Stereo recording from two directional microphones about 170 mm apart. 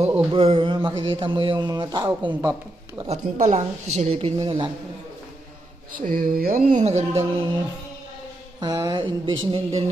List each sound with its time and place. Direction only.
0.3 s a man's voice: 35° right (ahead or behind)
3.0 s a woman's voice: 40° right (ahead or behind)
5.9 s speech: 55° right (ahead or behind)
8.5 s a man's voice: 20° right (ahead or behind)